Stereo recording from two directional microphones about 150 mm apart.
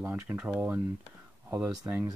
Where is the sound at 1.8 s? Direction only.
15° right (ahead or behind).